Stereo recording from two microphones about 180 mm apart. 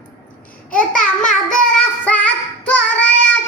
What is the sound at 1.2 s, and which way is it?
Child singing, 5° left (ahead or behind).